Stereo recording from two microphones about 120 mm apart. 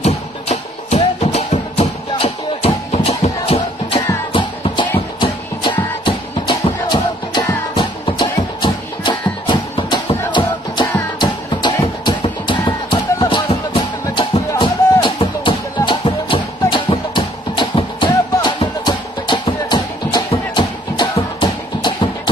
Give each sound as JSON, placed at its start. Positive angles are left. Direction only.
{"t": 0.0, "sound": "music", "side_deg": 65}
{"t": 4.3, "sound": "music", "side_deg": 45}
{"t": 12.0, "sound": "music", "side_deg": 40}